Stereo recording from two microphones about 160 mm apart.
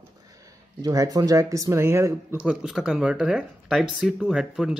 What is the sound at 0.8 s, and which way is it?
Speech, 20° right (ahead or behind).